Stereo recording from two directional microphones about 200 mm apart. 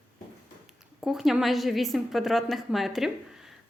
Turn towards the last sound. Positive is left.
turn(degrees=0)  # may be behind; listen again after turning